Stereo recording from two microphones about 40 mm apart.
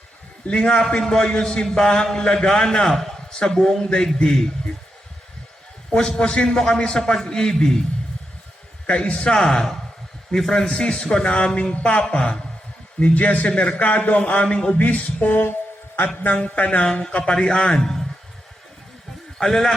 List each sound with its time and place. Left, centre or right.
0.4 s a man's voice: left
0.9 s a man's voice: centre
5.9 s a man's voice: left
8.9 s a man's voice: left
13.1 s speech: left
14.4 s a man's voice: left
14.8 s music: left
16.4 s a man's voice: left
17.7 s a man's voice: centre
19.4 s a man's voice: centre